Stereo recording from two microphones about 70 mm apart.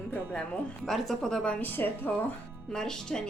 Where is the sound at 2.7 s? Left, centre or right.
Centre.